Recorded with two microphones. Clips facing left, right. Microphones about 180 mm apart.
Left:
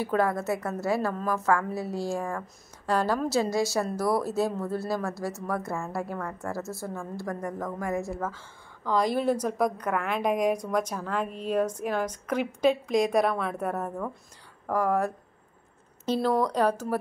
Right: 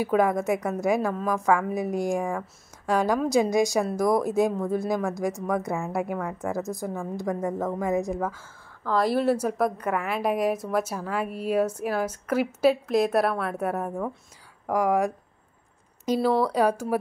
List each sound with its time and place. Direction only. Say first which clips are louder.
0.0 s a woman's voice: right 3 dB; 15° right (ahead or behind)